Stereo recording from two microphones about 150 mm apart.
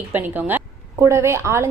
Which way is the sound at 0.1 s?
10° right (ahead or behind).